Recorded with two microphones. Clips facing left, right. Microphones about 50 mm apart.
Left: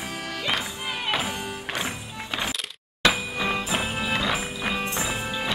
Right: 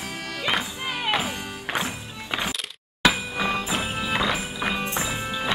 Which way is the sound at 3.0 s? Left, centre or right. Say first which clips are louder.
Right 1 dB; centre.